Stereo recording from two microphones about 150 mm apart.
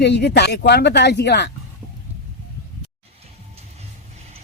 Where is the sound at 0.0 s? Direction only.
90° left.